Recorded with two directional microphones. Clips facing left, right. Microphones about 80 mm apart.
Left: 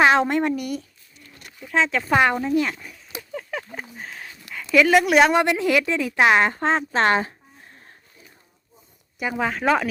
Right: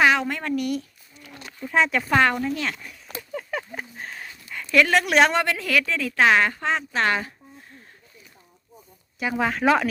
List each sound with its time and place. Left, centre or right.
0.0 s a sound: left
0.5 s speech: centre
1.2 s a sound: right
1.6 s speech: centre
2.0 s speech: centre
2.8 s a sound: centre
4.5 s a woman's voice: centre
5.3 s a woman's voice: centre
9.1 s speech: centre